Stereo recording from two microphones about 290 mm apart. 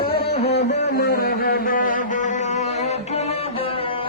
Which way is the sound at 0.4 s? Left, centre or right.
Left.